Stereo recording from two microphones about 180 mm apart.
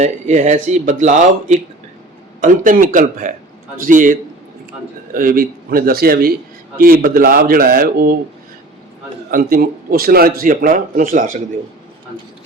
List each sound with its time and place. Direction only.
0.0 s a man's voice: 40° right (ahead or behind); by 8.2 s 55° right (ahead or behind)
9.3 s a man's voice: 55° right (ahead or behind)